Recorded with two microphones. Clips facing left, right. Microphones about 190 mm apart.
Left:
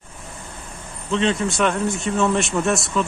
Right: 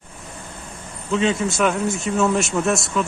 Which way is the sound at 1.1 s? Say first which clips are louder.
Even; centre (ahead or behind).